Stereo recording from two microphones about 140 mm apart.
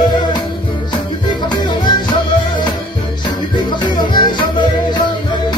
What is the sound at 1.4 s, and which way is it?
Music, 35° left (ahead or behind).